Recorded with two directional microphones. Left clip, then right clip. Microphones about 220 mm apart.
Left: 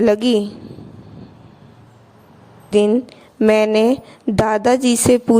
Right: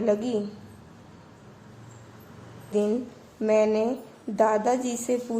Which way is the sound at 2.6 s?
45° left (ahead or behind).